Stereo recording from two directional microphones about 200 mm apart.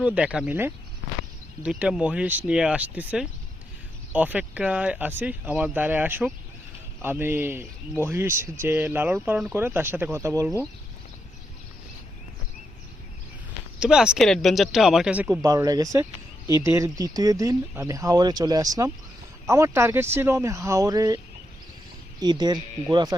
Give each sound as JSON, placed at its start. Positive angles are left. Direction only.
{"t": 0.0, "sound": "speech", "side_deg": -5}
{"t": 13.7, "sound": "speech", "side_deg": -5}
{"t": 15.4, "sound": "speech", "side_deg": -20}
{"t": 22.2, "sound": "speech", "side_deg": -20}